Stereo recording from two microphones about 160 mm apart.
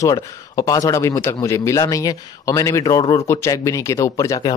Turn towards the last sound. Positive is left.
turn(degrees=25)  # may be behind; listen again after turning